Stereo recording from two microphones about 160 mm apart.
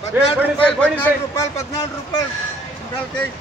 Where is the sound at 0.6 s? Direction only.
10° left (ahead or behind).